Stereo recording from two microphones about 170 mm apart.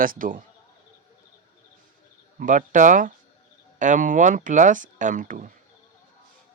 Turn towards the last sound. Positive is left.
turn(degrees=-50)  # may be behind; listen again after turning